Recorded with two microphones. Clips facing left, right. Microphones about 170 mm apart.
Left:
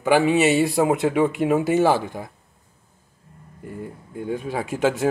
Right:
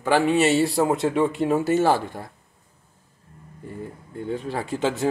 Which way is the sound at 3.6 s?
5° left (ahead or behind).